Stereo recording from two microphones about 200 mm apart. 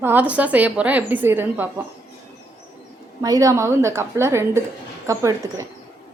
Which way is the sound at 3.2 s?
15° right (ahead or behind).